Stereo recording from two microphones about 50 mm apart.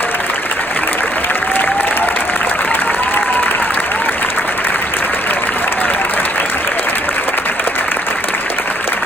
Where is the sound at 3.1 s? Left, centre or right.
Left.